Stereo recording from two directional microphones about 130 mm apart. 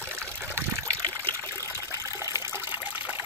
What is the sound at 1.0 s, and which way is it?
Trickle, 25° right (ahead or behind).